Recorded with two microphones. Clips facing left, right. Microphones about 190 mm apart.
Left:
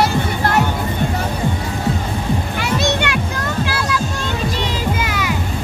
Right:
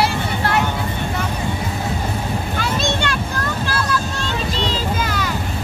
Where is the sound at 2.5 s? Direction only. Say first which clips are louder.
Left 2 dB; 20° left (ahead or behind).